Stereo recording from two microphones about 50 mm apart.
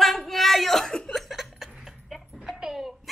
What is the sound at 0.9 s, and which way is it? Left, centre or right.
Chuckle, centre.